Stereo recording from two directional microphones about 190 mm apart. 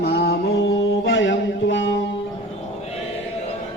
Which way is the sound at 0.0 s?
55° left (ahead or behind).